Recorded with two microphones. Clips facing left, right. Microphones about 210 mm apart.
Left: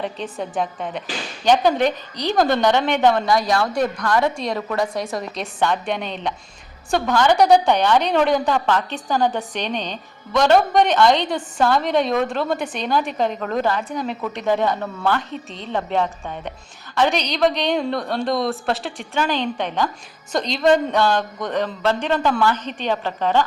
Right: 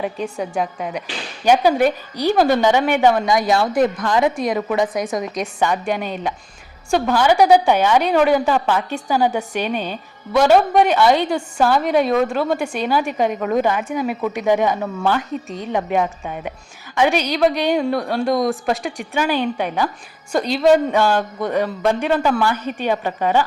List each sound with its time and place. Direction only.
0.6 s a woman's voice: 10° right (ahead or behind)
3.2 s a woman's voice: 20° right (ahead or behind)
4.4 s a woman's voice: centre (ahead or behind)